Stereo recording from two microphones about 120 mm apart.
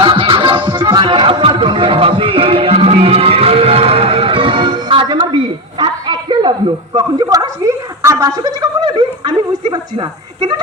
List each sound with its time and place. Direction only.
0.0 s music: 45° right (ahead or behind)